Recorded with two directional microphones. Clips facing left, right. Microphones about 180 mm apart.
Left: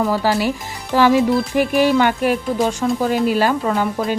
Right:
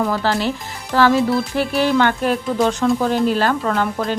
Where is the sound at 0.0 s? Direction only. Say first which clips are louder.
Left 2 dB; 10° left (ahead or behind).